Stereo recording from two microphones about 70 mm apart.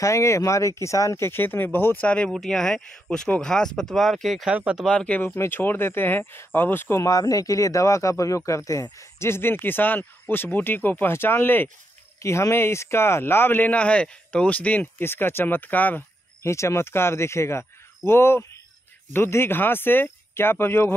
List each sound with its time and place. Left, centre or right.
0.0 s speech: left
1.1 s speech: left
2.0 s speech: centre
2.3 s speech: centre
4.5 s speech: centre
4.8 s speech: centre
5.2 s speech: left
7.0 s speech: left
12.2 s speech: left
16.4 s speech: left